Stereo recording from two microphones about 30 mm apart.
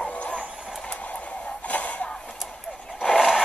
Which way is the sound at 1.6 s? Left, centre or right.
Left.